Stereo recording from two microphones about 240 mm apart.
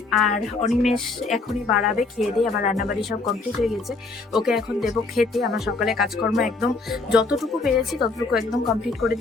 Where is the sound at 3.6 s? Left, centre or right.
Centre.